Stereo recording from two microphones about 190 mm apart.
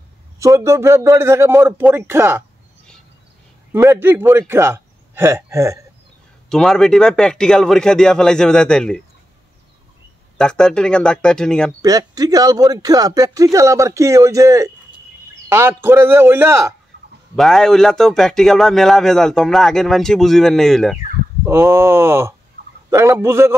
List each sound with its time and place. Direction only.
0.4 s speech: 15° right (ahead or behind)
3.7 s a man's voice: 10° right (ahead or behind)
6.5 s speech: centre (ahead or behind)
10.3 s speech: 5° left (ahead or behind)
11.8 s speech: 20° right (ahead or behind)
17.4 s speech: centre (ahead or behind)
21.5 s speech: 15° right (ahead or behind)